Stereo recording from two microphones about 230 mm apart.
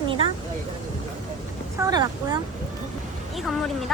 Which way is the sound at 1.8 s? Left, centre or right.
Centre.